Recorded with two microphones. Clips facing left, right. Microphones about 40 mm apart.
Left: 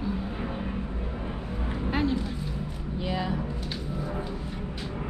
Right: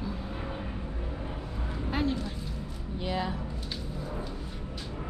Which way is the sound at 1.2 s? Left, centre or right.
Left.